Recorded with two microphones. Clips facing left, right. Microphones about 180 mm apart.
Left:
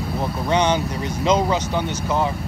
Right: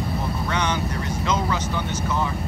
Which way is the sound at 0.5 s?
20° left (ahead or behind).